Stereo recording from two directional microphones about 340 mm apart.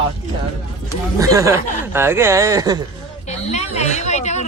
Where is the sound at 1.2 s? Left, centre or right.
Centre.